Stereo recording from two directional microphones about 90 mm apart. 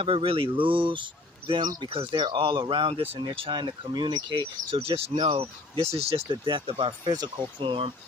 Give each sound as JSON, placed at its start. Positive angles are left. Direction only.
{"t": 0.0, "sound": "speech", "side_deg": -90}
{"t": 1.6, "sound": "speech", "side_deg": -50}
{"t": 1.9, "sound": "speech", "side_deg": -80}
{"t": 5.1, "sound": "speech", "side_deg": -65}
{"t": 6.3, "sound": "speech", "side_deg": -60}